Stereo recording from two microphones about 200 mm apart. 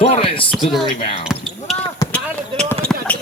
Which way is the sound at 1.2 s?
Centre (ahead or behind).